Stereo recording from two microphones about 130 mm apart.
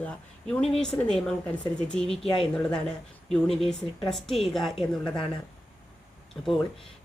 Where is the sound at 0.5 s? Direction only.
5° left (ahead or behind).